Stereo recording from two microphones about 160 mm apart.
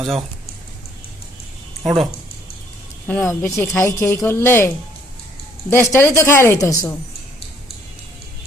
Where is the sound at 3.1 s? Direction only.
15° left (ahead or behind).